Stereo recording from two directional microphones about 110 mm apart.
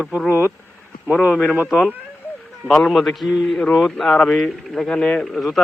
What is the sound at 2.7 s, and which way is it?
A man's voice, centre (ahead or behind).